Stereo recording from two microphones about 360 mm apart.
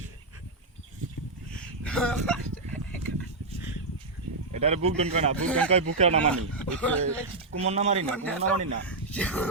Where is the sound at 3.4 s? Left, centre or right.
Right.